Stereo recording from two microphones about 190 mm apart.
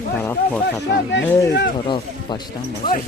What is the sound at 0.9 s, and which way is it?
Speech, 70° left (ahead or behind).